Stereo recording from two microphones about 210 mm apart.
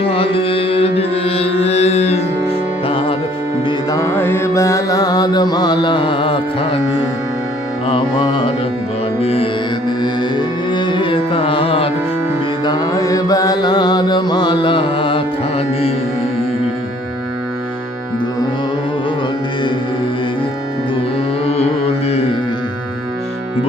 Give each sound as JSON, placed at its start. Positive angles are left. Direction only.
{"t": 0.0, "sound": "music", "side_deg": 25}
{"t": 3.7, "sound": "music", "side_deg": 15}
{"t": 7.9, "sound": "music", "side_deg": 25}
{"t": 10.0, "sound": "carnatic music", "side_deg": 20}
{"t": 12.6, "sound": "mantra", "side_deg": 20}
{"t": 21.4, "sound": "music", "side_deg": 30}